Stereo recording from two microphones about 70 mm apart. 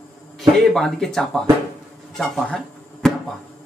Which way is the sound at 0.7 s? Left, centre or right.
Centre.